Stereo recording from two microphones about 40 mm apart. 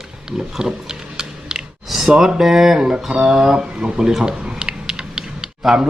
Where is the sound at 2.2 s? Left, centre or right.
Centre.